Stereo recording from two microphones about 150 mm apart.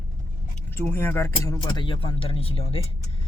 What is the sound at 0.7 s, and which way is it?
Speech, 15° left (ahead or behind).